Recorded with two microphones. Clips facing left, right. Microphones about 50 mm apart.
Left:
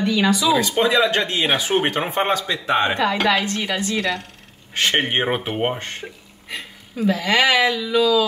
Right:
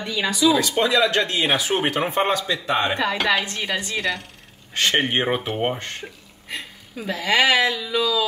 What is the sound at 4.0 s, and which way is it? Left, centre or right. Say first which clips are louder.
Speech: left 2 dB; centre.